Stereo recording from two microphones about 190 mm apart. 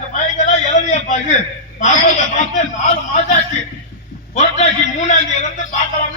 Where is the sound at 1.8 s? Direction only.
40° left (ahead or behind).